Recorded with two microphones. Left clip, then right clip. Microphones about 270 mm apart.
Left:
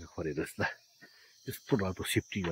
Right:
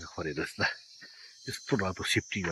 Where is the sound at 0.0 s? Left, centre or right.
Centre.